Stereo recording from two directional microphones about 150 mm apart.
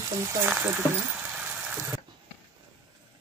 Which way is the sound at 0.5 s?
10° right (ahead or behind).